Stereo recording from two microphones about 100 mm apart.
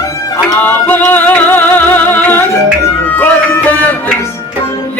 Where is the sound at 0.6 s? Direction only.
20° left (ahead or behind).